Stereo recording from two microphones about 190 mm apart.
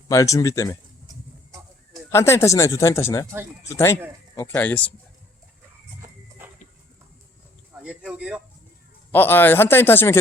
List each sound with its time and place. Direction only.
0.1 s speech: 15° left (ahead or behind)
2.0 s speech: 15° left (ahead or behind)
6.4 s a sound: 10° right (ahead or behind)
7.7 s speech: 5° right (ahead or behind)
9.1 s speech: 10° left (ahead or behind)